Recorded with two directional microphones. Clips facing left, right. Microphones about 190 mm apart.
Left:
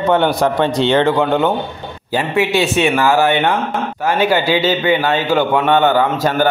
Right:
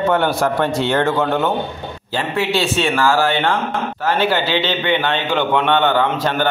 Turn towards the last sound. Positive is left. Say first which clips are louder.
# left 3 dB
turn(degrees=10)  # may be behind; listen again after turning